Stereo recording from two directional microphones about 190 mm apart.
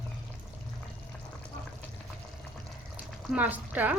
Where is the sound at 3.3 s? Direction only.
10° right (ahead or behind).